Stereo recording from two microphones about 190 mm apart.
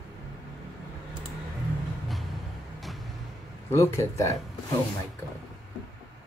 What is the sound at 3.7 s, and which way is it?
Speech, 15° left (ahead or behind).